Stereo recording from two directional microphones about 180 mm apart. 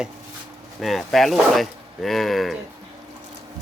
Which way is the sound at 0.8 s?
Centre (ahead or behind).